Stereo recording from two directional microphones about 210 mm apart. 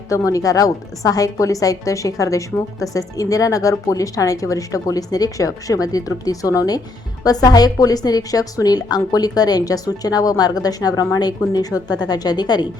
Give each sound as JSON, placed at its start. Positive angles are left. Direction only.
{"t": 0.1, "sound": "a woman's voice", "side_deg": 15}